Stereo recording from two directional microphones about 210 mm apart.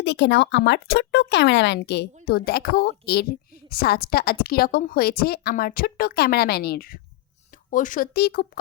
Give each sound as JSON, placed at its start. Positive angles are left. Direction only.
{"t": 0.0, "sound": "a woman's voice", "side_deg": 55}